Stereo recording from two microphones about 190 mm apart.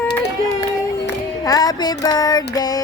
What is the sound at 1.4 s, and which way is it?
Music, 20° left (ahead or behind).